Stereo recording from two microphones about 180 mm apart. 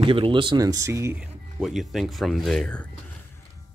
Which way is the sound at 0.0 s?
30° right (ahead or behind).